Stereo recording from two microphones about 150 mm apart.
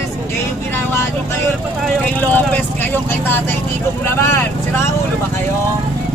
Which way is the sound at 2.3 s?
10° left (ahead or behind).